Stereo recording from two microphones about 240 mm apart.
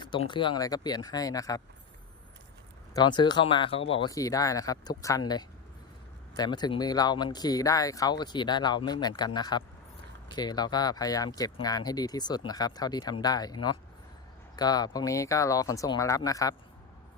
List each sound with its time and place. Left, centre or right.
0.0 s speech: centre
2.9 s speech: centre
6.3 s speech: centre